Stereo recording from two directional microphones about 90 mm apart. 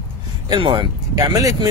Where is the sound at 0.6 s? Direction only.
65° right (ahead or behind).